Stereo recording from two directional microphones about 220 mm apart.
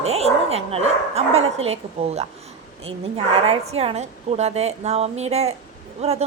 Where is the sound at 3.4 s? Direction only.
30° right (ahead or behind).